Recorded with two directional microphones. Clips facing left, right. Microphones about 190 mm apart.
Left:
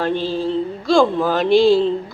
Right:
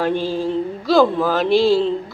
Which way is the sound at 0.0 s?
10° right (ahead or behind).